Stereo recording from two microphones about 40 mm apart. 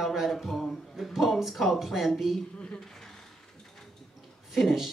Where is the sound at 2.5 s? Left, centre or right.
Left.